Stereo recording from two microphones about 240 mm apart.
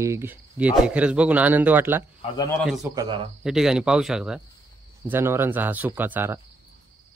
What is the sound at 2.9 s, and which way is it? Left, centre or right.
Speech, centre.